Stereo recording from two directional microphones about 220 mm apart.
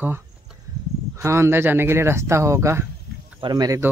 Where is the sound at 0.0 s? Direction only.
10° right (ahead or behind).